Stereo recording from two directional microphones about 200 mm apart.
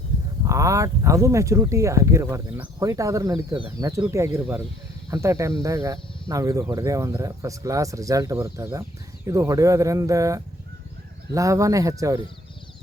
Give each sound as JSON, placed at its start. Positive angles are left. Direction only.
{"t": 0.4, "sound": "speech", "side_deg": -15}